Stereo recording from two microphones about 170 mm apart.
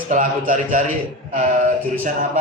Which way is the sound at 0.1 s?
50° right (ahead or behind).